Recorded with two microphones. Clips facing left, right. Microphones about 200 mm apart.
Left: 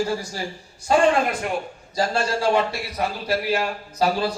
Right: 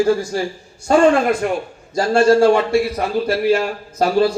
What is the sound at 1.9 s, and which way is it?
A man's voice, 50° right (ahead or behind).